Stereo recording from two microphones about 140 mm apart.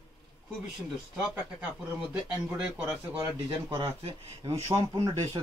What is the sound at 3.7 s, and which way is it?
Speech, 30° right (ahead or behind).